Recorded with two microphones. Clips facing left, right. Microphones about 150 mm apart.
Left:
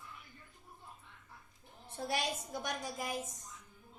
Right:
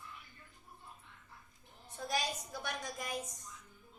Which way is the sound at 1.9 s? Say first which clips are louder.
Left 1 dB; 30° left (ahead or behind).